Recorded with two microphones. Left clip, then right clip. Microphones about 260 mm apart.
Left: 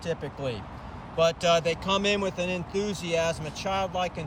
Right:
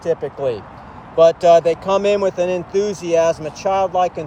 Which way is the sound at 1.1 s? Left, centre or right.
Centre.